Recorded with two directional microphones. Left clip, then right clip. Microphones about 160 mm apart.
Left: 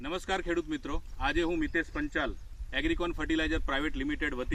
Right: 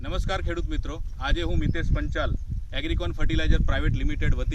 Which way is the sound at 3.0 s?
35° right (ahead or behind).